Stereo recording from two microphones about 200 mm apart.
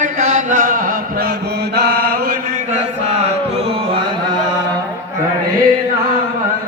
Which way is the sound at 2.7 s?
30° right (ahead or behind).